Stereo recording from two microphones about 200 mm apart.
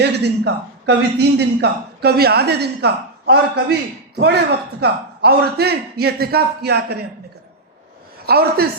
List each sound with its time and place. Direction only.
0.0 s a man's voice: 55° right (ahead or behind)
4.8 s a man's voice: 55° right (ahead or behind)
8.3 s a man's voice: 50° right (ahead or behind)